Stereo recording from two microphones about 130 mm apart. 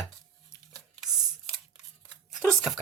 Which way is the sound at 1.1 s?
5° right (ahead or behind).